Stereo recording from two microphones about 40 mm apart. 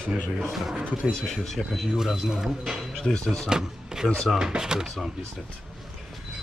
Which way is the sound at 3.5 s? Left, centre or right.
Centre.